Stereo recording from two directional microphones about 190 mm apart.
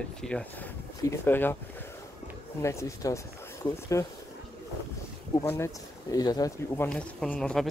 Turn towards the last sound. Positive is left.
turn(degrees=5)  # may be behind; listen again after turning